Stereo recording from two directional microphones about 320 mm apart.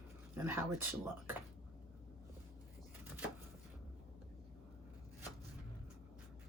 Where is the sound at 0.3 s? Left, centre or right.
Centre.